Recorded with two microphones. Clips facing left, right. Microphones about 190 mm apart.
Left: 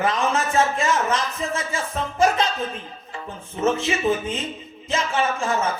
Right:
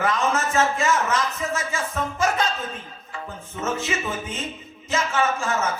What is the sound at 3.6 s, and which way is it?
A man's voice, 30° left (ahead or behind).